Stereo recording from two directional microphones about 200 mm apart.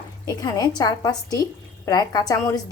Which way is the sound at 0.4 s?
20° left (ahead or behind).